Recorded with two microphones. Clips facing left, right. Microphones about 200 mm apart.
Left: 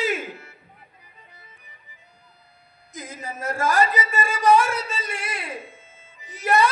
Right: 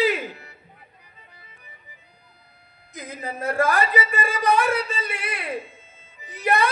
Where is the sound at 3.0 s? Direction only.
55° right (ahead or behind).